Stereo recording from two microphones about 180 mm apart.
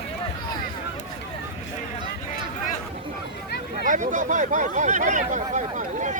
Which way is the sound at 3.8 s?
45° right (ahead or behind).